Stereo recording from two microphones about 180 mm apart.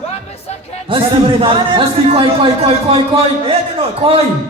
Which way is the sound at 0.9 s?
30° right (ahead or behind).